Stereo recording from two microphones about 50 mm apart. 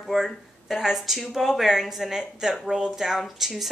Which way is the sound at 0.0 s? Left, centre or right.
Centre.